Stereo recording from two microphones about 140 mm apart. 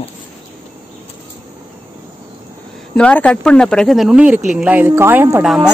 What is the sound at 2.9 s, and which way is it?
A woman's voice, 10° left (ahead or behind).